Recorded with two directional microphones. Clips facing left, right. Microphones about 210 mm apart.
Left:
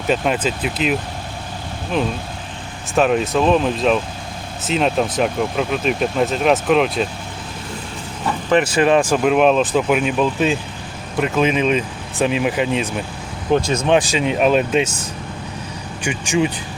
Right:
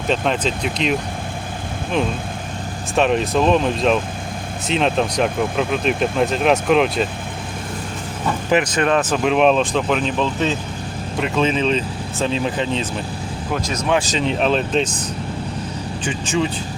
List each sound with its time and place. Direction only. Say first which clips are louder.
0.1 s speech: left 1 dB; 5° left (ahead or behind)
2.9 s speech: left 1 dB; centre (ahead or behind)
8.6 s speech: left 3 dB; 5° left (ahead or behind)
13.5 s speech: left 5 dB; 30° left (ahead or behind)
14.0 s speech: left 2 dB; 10° left (ahead or behind)
16.0 s speech: left 3 dB; 15° left (ahead or behind)